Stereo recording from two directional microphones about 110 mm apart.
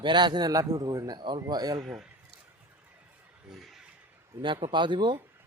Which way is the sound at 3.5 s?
Centre (ahead or behind).